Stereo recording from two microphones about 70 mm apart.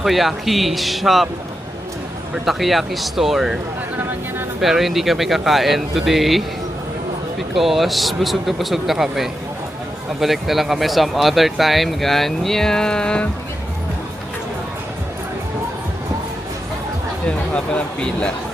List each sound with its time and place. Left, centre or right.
0.0 s speech: centre
2.3 s speech: centre
4.6 s speech: centre
7.5 s speech: centre
17.2 s speech: centre